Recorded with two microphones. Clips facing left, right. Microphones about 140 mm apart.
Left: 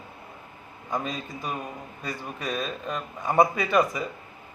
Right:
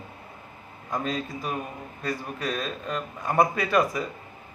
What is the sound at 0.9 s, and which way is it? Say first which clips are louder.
A man's voice: right 2 dB; centre (ahead or behind).